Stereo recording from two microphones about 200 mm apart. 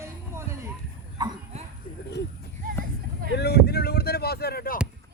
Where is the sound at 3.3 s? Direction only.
55° left (ahead or behind).